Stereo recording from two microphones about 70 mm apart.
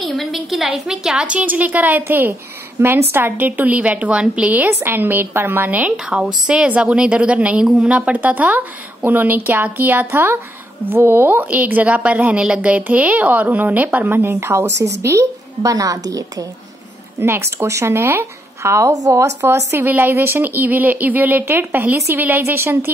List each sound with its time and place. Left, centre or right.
0.0 s a sound: centre
0.7 s a woman's voice: centre
4.6 s a woman's voice: right
17.2 s speech: right
19.4 s a woman's voice: right